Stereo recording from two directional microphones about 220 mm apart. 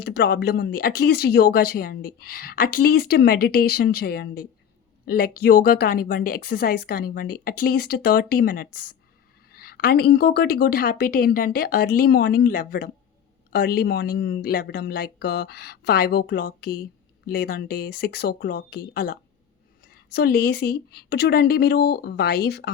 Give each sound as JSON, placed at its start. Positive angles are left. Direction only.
{"t": 0.0, "sound": "speech", "side_deg": 50}